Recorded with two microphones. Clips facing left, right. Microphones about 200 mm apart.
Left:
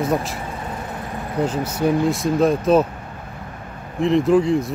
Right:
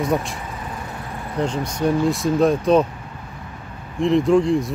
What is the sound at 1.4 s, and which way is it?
Speech, 5° left (ahead or behind).